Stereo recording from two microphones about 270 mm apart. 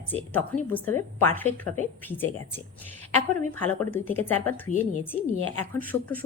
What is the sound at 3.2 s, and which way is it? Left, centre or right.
A woman's voice, centre.